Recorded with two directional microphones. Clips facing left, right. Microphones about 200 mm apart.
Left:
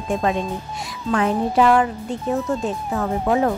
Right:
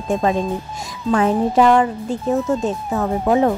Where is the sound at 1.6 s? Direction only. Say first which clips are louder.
Right 2 dB; 30° right (ahead or behind).